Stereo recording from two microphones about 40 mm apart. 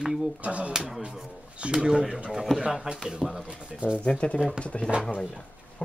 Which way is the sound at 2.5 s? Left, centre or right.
Centre.